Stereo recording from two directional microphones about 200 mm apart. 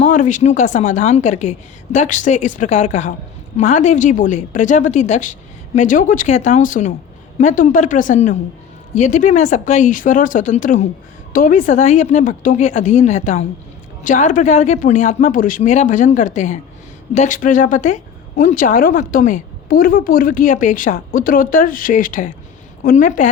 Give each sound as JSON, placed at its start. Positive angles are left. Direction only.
{"t": 0.0, "sound": "speech", "side_deg": 40}